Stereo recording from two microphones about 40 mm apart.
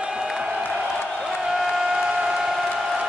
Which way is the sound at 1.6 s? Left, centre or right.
Centre.